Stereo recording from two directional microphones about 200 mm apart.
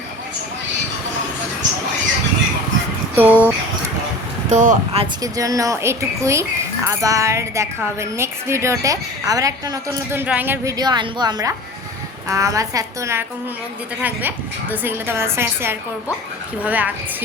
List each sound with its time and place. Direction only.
3.2 s speech: 5° right (ahead or behind)
4.4 s speech: 40° right (ahead or behind)
5.2 s a woman's voice: 15° right (ahead or behind)